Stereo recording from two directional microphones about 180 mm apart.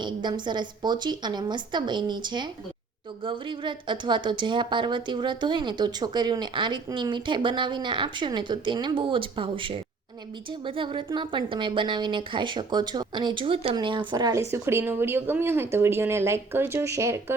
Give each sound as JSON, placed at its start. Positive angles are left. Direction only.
{"t": 0.0, "sound": "a woman's voice", "side_deg": -25}